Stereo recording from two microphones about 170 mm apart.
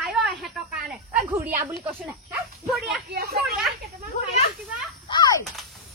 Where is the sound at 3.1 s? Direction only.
65° right (ahead or behind).